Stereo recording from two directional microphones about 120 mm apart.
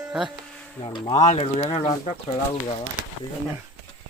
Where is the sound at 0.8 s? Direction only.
40° left (ahead or behind).